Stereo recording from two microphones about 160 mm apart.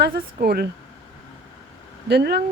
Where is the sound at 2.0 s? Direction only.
90° right.